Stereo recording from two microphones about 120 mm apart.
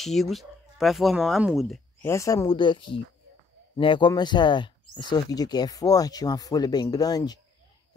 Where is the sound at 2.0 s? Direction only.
25° left (ahead or behind).